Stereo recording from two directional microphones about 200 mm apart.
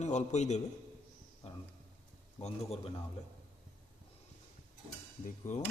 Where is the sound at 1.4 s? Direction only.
35° left (ahead or behind).